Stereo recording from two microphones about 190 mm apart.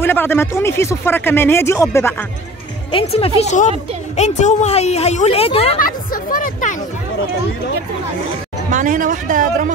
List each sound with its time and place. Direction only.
0.0 s speech: 10° left (ahead or behind)
2.9 s speech: 30° left (ahead or behind)
6.3 s a sound: 45° left (ahead or behind)
8.6 s a man's voice: 40° right (ahead or behind)